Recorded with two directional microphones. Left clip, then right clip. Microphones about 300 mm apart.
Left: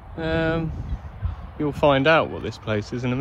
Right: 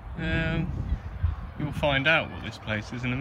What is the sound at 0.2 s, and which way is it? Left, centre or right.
Speech, centre.